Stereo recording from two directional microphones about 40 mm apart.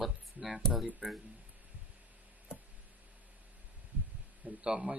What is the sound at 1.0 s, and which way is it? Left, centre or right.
Speech, centre.